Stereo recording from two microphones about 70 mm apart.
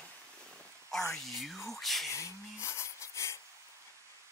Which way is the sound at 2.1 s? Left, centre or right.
Left.